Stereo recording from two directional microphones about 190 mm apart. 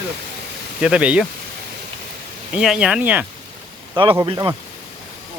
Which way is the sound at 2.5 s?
5° right (ahead or behind).